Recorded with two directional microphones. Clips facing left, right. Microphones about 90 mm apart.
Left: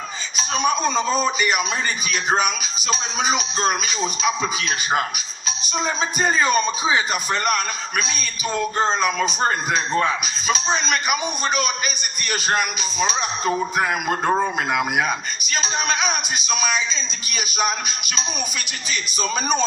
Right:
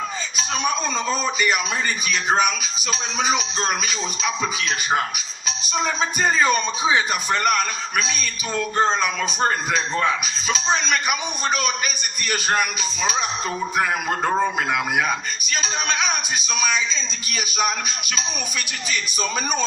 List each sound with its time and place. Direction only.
0.6 s a man's voice: 15° left (ahead or behind)
6.1 s a man's voice: 5° left (ahead or behind)
9.0 s a man's voice: 5° left (ahead or behind)
17.4 s speech: centre (ahead or behind)